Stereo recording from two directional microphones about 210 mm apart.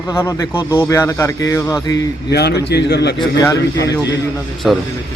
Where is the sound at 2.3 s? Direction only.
50° left (ahead or behind).